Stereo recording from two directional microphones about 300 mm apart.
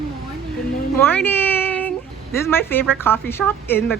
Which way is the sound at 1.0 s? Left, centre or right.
Centre.